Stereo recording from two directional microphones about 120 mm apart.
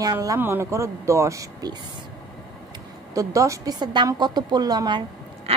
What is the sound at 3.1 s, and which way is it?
A woman's voice, 25° right (ahead or behind).